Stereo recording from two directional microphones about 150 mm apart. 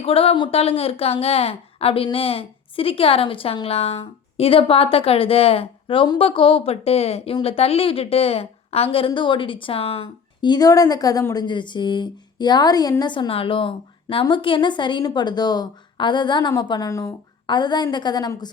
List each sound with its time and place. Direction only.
0.0 s a woman's voice: 40° left (ahead or behind)